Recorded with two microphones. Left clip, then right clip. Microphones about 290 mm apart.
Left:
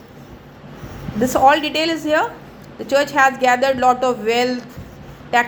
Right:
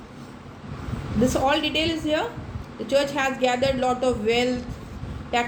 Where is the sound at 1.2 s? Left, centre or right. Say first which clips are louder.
Left 8 dB; centre.